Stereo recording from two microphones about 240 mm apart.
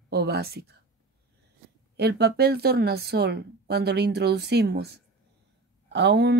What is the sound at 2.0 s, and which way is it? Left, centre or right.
Speech, right.